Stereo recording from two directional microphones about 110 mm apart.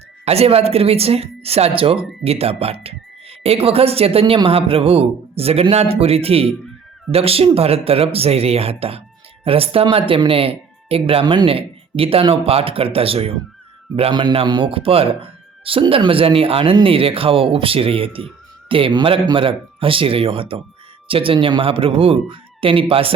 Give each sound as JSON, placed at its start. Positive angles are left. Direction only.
{"t": 0.3, "sound": "speech", "side_deg": -65}
{"t": 9.8, "sound": "speech", "side_deg": -50}